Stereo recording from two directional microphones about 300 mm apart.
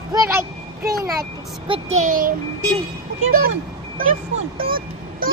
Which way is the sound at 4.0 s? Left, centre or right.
Right.